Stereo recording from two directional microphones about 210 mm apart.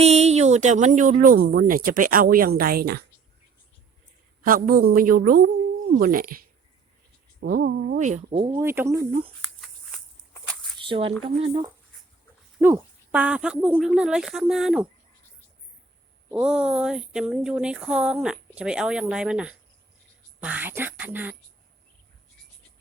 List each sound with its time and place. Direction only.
0.0 s speech: 30° right (ahead or behind); by 3.0 s 45° right (ahead or behind)
4.4 s a woman's voice: 45° right (ahead or behind)
8.4 s speech: 15° right (ahead or behind)
9.4 s a sound: centre (ahead or behind)
10.8 s a sound: 25° right (ahead or behind)
11.2 s speech: 25° right (ahead or behind)
12.5 s speech: 5° right (ahead or behind)
16.3 s speech: 5° right (ahead or behind)